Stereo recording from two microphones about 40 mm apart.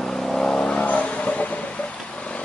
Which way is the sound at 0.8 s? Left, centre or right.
Left.